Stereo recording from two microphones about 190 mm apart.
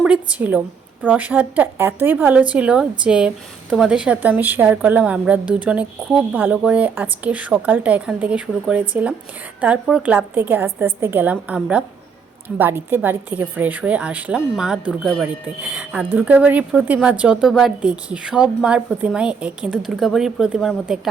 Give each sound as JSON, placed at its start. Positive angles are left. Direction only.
{"t": 0.0, "sound": "a woman's voice", "side_deg": -5}